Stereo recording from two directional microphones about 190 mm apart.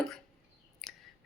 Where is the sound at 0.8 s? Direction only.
Centre (ahead or behind).